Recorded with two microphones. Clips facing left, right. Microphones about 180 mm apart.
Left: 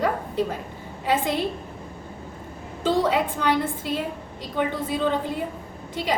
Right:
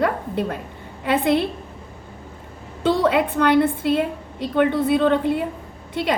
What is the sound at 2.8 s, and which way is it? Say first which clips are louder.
A woman's voice: right 3 dB; 65° right (ahead or behind).